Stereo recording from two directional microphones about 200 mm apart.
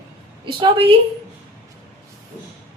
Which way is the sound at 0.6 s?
25° right (ahead or behind).